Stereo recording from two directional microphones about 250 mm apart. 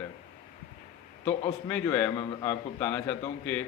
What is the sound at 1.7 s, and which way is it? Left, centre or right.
Speech, centre.